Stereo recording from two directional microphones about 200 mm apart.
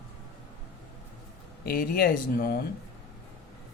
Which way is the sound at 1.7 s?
50° left (ahead or behind).